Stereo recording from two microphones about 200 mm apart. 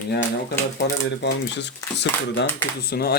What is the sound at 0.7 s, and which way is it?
Speech, 60° left (ahead or behind).